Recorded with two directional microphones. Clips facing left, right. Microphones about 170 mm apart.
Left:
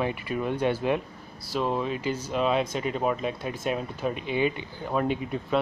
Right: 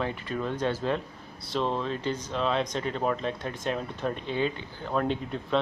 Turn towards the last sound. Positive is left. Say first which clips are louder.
# left 2 dB
turn(degrees=10)  # may be behind; listen again after turning